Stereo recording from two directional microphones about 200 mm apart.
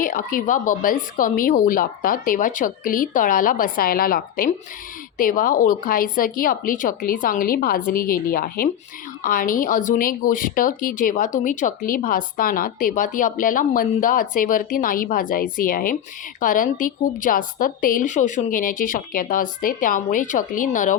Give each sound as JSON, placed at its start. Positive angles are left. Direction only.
{"t": 0.0, "sound": "speech", "side_deg": 45}